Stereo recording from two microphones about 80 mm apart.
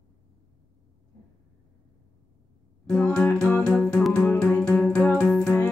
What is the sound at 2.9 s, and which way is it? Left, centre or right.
Music, centre.